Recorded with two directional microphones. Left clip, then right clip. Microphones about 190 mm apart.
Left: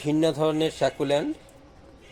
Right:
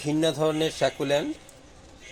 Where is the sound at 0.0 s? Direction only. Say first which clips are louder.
Left 1 dB; 5° left (ahead or behind).